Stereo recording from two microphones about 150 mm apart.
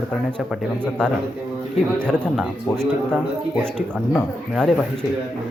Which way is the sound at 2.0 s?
5° left (ahead or behind).